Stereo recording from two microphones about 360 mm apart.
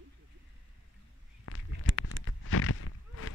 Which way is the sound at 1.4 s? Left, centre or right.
Left.